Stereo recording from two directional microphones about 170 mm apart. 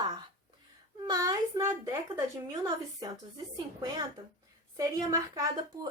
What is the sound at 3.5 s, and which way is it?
Speech, 25° right (ahead or behind).